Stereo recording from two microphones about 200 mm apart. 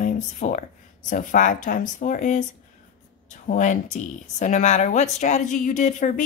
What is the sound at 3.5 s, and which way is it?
Speech, 40° left (ahead or behind).